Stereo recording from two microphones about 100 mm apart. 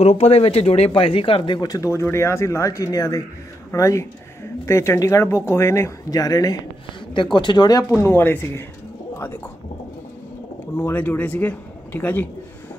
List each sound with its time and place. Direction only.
0.0 s speech: 90° left; by 1.8 s 45° left (ahead or behind)
1.8 s speech: 25° left (ahead or behind)
7.3 s speech: 50° left (ahead or behind)
7.9 s speech: 25° left (ahead or behind)
10.8 s a man's voice: 20° left (ahead or behind)